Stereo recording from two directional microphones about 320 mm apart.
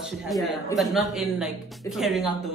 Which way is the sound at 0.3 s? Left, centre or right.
Centre.